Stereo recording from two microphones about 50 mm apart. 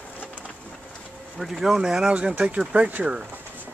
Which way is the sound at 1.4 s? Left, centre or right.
Centre.